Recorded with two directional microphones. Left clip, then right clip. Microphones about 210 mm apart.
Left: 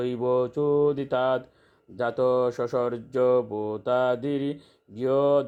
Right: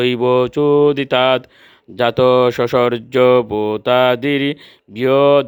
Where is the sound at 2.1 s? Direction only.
30° right (ahead or behind).